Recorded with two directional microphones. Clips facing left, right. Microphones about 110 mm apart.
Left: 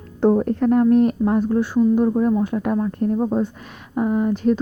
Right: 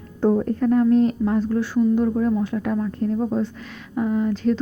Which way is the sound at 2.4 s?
50° left (ahead or behind).